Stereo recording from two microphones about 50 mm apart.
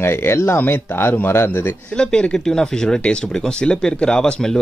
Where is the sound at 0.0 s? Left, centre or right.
Left.